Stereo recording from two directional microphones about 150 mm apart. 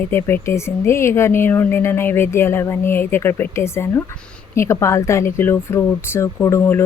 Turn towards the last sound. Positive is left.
turn(degrees=15)  # may be behind; listen again after turning